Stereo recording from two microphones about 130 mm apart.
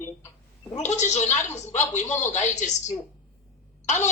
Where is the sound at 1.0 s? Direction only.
65° left (ahead or behind).